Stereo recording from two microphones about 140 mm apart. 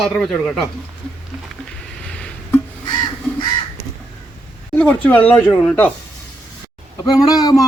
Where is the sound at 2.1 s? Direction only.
5° left (ahead or behind).